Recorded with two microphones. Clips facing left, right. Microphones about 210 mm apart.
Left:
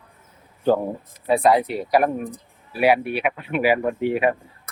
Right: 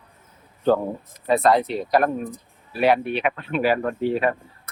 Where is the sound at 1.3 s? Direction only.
10° left (ahead or behind).